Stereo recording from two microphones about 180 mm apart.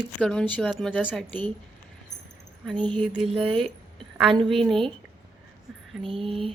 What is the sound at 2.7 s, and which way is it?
Speech, 5° left (ahead or behind).